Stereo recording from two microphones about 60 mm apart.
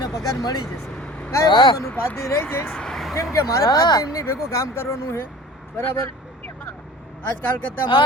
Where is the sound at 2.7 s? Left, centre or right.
Centre.